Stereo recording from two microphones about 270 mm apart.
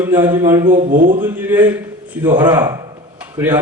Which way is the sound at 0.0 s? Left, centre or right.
Centre.